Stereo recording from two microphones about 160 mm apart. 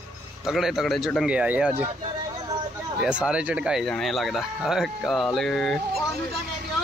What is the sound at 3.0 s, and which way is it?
Speech, 5° right (ahead or behind).